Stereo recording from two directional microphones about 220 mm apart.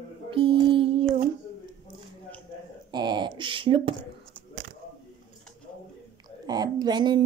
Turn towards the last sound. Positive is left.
turn(degrees=-20)  # may be behind; listen again after turning